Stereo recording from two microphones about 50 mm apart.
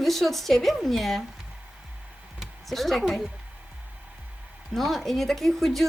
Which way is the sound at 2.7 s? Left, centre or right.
Centre.